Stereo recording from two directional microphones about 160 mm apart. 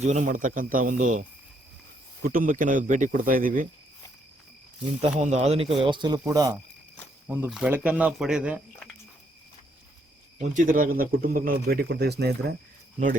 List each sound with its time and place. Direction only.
0.0 s a man's voice: 45° right (ahead or behind)
2.2 s a man's voice: 60° right (ahead or behind)
5.2 s a man's voice: 45° right (ahead or behind); by 6.1 s 30° right (ahead or behind)
6.1 s speech: 20° right (ahead or behind)
7.3 s speech: 10° right (ahead or behind)
10.3 s a man's voice: 50° right (ahead or behind); by 12.5 s 90° right